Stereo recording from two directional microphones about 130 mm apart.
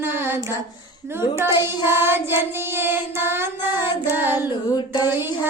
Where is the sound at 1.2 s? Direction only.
20° right (ahead or behind).